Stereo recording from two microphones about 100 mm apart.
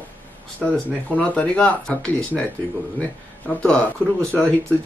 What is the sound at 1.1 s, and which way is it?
Speech, 15° left (ahead or behind).